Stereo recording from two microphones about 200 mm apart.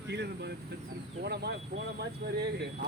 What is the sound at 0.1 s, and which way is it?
Speech, 55° right (ahead or behind).